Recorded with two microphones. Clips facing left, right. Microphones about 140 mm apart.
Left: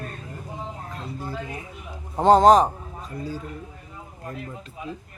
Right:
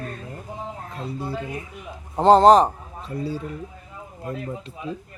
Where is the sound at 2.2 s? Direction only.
5° left (ahead or behind).